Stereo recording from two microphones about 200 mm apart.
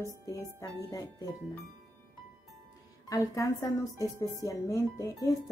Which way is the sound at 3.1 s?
15° left (ahead or behind).